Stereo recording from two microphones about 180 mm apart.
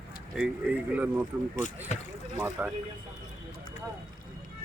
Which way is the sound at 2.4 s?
10° right (ahead or behind).